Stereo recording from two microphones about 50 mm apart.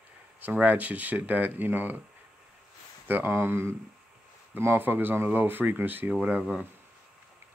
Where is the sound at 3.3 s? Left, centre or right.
Right.